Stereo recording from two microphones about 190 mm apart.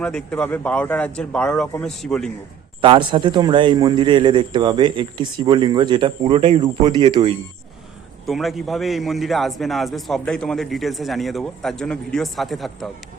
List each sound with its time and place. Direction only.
0.0 s a man's voice: 5° left (ahead or behind)
2.8 s a man's voice: 25° right (ahead or behind)
8.3 s a man's voice: centre (ahead or behind)